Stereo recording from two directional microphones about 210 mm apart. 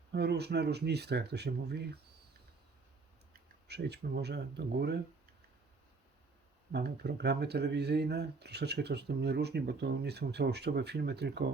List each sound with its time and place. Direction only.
0.1 s speech: 55° right (ahead or behind)
3.7 s speech: 50° right (ahead or behind)
6.7 s speech: 50° right (ahead or behind)